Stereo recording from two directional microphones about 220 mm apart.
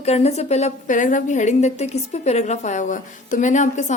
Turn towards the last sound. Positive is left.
turn(degrees=35)  # may be behind; listen again after turning